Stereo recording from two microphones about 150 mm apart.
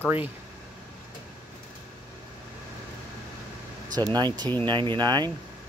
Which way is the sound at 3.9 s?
25° right (ahead or behind).